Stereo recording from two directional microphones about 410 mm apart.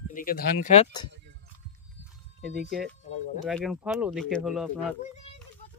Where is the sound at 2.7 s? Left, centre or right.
Centre.